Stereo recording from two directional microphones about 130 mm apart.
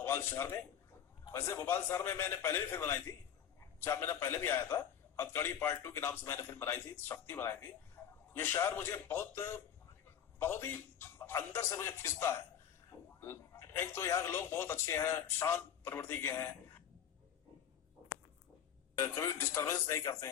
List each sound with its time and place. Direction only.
0.0 s a man's voice: 20° left (ahead or behind)
8.0 s a sound: 15° left (ahead or behind)
8.4 s a man's voice: 20° left (ahead or behind)
18.9 s a man's voice: 20° left (ahead or behind)